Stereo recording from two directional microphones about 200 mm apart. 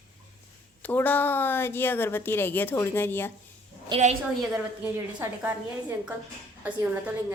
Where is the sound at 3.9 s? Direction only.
35° right (ahead or behind).